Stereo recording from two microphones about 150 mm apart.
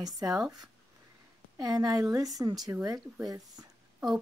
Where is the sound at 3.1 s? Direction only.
25° right (ahead or behind).